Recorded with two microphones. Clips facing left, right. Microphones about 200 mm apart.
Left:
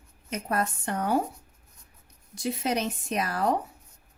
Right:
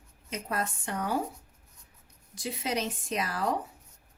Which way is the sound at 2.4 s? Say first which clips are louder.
Left 4 dB; 55° left (ahead or behind).